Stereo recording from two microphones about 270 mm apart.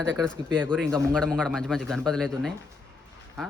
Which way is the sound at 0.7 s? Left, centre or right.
Centre.